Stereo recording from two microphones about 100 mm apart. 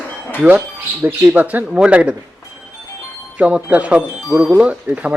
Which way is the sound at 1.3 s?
15° right (ahead or behind).